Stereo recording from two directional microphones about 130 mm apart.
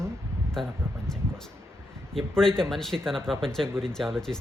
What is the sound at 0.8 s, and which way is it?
Speech, 20° right (ahead or behind).